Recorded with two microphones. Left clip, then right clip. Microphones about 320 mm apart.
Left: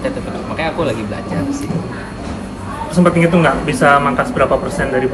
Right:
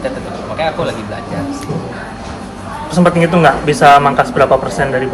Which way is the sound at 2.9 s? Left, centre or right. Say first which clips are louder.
Right 2 dB; right.